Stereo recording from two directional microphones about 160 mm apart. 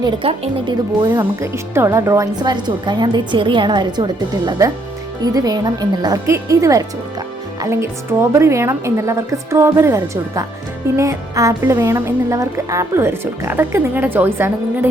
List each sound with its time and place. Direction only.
0.0 s speech: 35° right (ahead or behind)
1.0 s a woman's voice: 20° right (ahead or behind)